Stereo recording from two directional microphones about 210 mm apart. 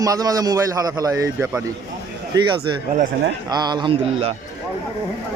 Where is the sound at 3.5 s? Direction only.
20° right (ahead or behind).